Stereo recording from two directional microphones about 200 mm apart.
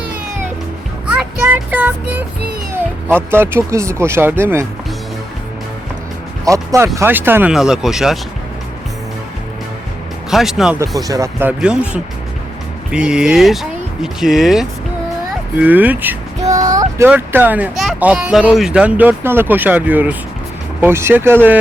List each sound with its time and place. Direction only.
1.0 s a sound: 5° right (ahead or behind)
2.7 s speech: 10° right (ahead or behind)
6.4 s speech: 15° right (ahead or behind)
10.2 s speech: centre (ahead or behind)
11.1 s speech: 15° right (ahead or behind)
16.4 s a sound: 35° right (ahead or behind)
17.0 s speech: 10° right (ahead or behind)